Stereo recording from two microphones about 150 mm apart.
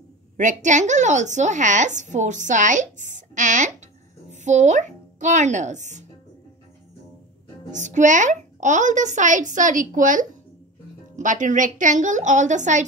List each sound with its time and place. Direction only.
0.4 s a woman's voice: 55° right (ahead or behind)
7.7 s a woman's voice: 55° right (ahead or behind)